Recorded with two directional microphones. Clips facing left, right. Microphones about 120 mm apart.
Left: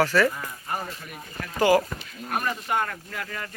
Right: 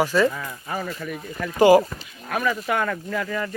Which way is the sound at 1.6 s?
15° right (ahead or behind).